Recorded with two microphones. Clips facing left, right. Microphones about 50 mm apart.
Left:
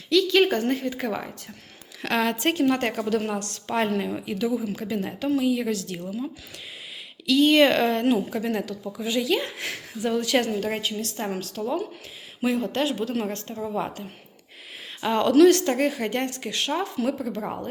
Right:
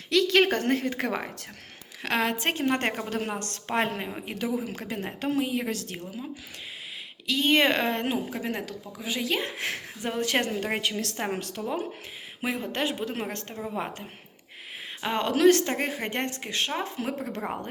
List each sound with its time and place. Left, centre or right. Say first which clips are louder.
0.1 s a woman's voice: left 2 dB; right
2.0 s a woman's voice: left 2 dB; centre
4.6 s a woman's voice: left 5 dB; right
7.3 s a woman's voice: left 5 dB; right
9.4 s a woman's voice: even; right
10.8 s a woman's voice: even; right
11.2 s a woman's voice: left 2 dB; right
12.4 s a woman's voice: left 5 dB; right
15.0 s a woman's voice: left 5 dB; right